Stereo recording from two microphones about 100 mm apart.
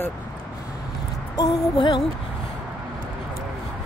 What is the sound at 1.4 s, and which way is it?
Music, 50° left (ahead or behind).